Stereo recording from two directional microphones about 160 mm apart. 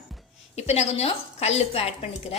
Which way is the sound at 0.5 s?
40° left (ahead or behind).